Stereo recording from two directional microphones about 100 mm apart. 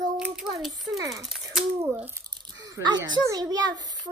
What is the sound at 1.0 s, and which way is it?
Speech, 35° right (ahead or behind).